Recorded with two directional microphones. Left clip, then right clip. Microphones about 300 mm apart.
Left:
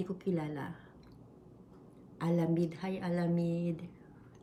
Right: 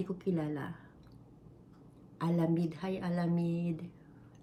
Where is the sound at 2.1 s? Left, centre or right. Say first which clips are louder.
Even; centre.